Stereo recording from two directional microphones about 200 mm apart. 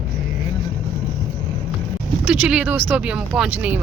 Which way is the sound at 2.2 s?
10° right (ahead or behind).